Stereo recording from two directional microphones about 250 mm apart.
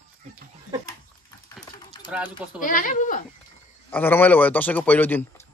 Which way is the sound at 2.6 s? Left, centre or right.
Left.